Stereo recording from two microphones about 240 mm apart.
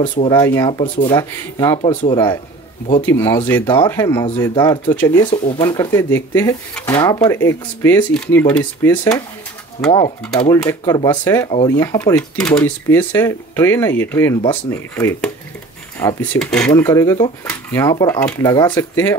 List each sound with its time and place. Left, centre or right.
0.0 s speech: centre
9.8 s speech: left
16.3 s speech: centre
16.7 s speech: centre